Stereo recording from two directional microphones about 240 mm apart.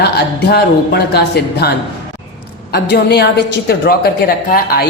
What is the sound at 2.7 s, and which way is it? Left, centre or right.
Speech, left.